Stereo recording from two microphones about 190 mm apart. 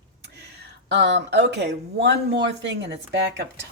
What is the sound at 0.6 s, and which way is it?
Speech, 65° right (ahead or behind).